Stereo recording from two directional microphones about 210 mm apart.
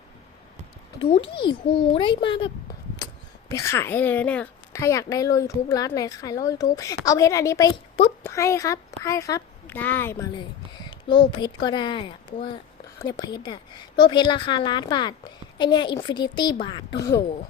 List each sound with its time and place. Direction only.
1.4 s a woman's voice: 25° left (ahead or behind)
3.5 s a woman's voice: 15° left (ahead or behind)
8.2 s speech: 15° left (ahead or behind)
10.8 s a woman's voice: 20° left (ahead or behind)